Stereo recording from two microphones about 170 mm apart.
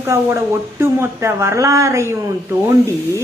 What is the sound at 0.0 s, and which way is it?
Speech, 15° right (ahead or behind).